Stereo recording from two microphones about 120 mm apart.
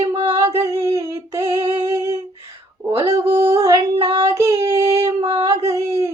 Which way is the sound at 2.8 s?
25° right (ahead or behind).